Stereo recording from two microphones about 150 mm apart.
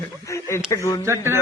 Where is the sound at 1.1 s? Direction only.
15° right (ahead or behind).